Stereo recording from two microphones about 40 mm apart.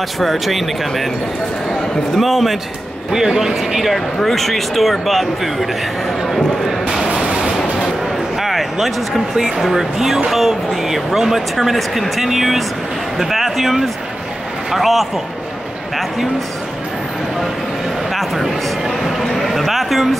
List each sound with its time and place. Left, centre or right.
0.2 s speech: centre
2.1 s speech: centre
3.1 s speech: centre
4.2 s speech: centre
7.1 s music: centre
7.5 s a sound: centre
8.4 s speech: centre
18.1 s speech: centre
19.2 s a sound: centre